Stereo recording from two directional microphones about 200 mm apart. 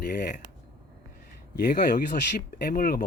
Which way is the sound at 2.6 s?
45° left (ahead or behind).